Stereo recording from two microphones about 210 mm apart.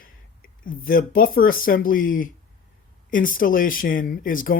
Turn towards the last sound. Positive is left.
turn(degrees=40)  # may be behind; listen again after turning